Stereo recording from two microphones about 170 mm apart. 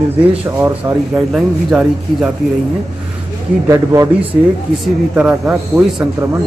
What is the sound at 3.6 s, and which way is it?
Speech, 20° right (ahead or behind).